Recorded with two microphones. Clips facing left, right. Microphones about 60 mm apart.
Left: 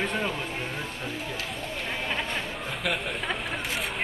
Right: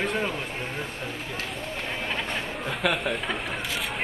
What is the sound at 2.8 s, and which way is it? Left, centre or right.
Speech, right.